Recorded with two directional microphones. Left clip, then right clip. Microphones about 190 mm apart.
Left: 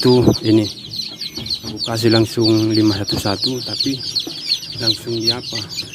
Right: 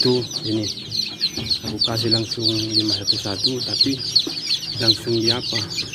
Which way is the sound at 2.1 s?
60° left (ahead or behind).